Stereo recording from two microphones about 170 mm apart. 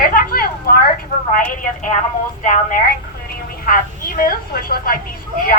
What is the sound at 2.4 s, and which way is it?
A woman's voice, 50° left (ahead or behind).